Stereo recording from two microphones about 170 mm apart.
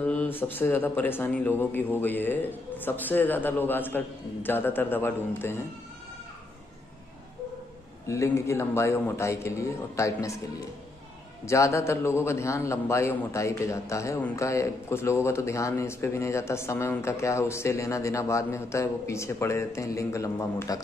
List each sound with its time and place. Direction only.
0.0 s a man's voice: 10° left (ahead or behind)
8.1 s a man's voice: 15° left (ahead or behind)
11.4 s a man's voice: 15° left (ahead or behind)